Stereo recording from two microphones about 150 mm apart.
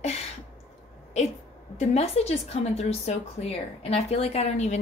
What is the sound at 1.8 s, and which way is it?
A woman's voice, 45° left (ahead or behind).